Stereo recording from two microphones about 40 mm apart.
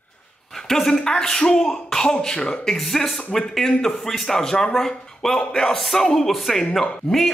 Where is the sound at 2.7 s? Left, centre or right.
Centre.